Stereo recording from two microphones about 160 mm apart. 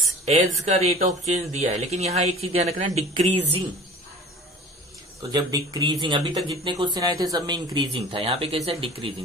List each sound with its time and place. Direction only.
0.0 s speech: 45° right (ahead or behind)
5.3 s speech: 25° right (ahead or behind)